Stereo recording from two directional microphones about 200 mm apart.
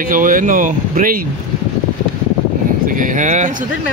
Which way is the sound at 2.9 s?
40° right (ahead or behind).